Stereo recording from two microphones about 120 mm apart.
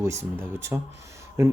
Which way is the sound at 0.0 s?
25° right (ahead or behind).